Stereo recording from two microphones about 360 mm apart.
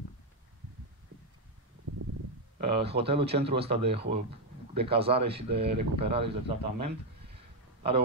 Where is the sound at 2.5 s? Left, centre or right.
Centre.